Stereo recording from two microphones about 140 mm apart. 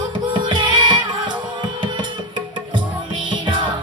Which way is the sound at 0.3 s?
35° right (ahead or behind).